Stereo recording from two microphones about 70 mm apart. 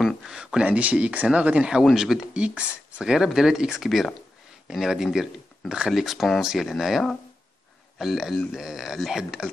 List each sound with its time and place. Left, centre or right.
0.0 s a sound: centre
0.4 s speech: centre
1.8 s speech: centre